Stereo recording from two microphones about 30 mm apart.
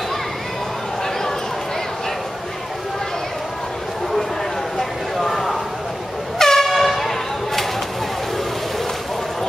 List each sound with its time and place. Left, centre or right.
5.1 s a sound: centre
6.3 s air horn: centre
6.7 s vehicle: centre